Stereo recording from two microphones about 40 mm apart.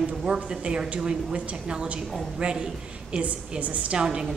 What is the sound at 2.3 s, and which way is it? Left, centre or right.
Speech, right.